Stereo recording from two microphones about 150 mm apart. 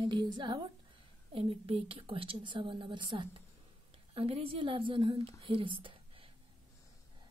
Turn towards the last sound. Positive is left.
turn(degrees=-35)  # may be behind; listen again after turning